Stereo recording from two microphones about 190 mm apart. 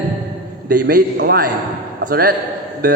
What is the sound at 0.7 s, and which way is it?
A man's voice, 55° right (ahead or behind).